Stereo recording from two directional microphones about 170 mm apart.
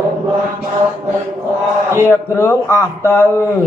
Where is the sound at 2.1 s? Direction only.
15° left (ahead or behind).